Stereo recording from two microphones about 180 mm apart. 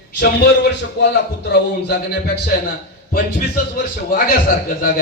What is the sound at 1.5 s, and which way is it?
Speech, 65° left (ahead or behind).